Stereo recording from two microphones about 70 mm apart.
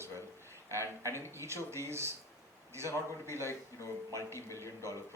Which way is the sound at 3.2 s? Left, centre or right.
Right.